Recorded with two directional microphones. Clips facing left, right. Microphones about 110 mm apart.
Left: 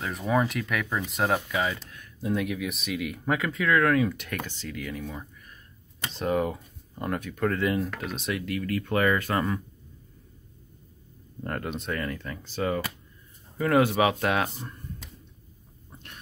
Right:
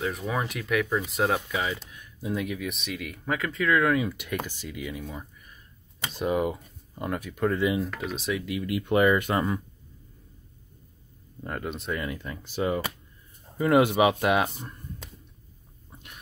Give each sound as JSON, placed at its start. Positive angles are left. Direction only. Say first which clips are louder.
{"t": 0.3, "sound": "speech", "louder": "left 6 dB", "side_deg": 0}
{"t": 8.6, "sound": "speech", "louder": "right 3 dB", "side_deg": -15}
{"t": 11.4, "sound": "speech", "louder": "left 1 dB", "side_deg": 0}
{"t": 12.0, "sound": "speech", "louder": "left 1 dB", "side_deg": -15}
{"t": 15.9, "sound": "a sound", "louder": "left 1 dB", "side_deg": -5}